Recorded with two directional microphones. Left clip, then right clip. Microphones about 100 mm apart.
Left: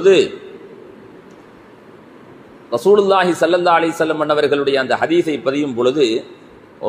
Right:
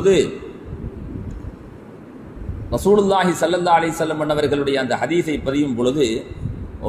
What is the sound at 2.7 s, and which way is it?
A man's voice, 30° left (ahead or behind).